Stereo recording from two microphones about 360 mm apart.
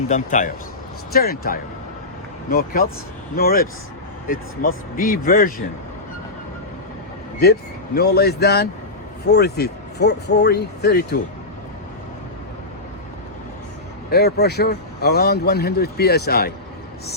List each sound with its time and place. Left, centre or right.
0.1 s speech: left
7.9 s speech: left
14.1 s speech: left